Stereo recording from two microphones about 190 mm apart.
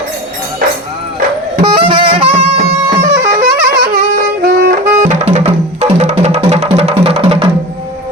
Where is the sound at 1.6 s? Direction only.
25° right (ahead or behind).